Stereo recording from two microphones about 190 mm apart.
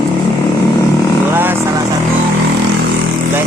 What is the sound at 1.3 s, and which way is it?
Vehicle, 10° right (ahead or behind).